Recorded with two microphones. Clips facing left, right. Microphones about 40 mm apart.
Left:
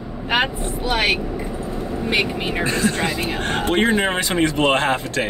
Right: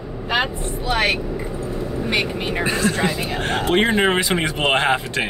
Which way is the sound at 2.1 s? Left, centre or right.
Centre.